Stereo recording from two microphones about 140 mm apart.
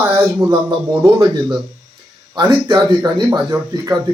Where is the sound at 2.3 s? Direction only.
30° right (ahead or behind).